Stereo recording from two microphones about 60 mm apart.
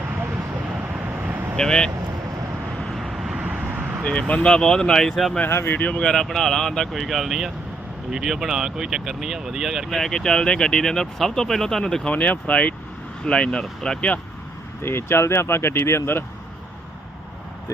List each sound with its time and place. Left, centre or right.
0.9 s vehicle: right
1.5 s speech: centre
2.8 s vehicle: centre
3.3 s vehicle: centre
3.7 s vehicle: right
4.0 s speech: centre
5.5 s speech: left
5.7 s speech: left; by 10.0 s centre
10.0 s speech: centre
12.0 s speech: left
14.8 s speech: left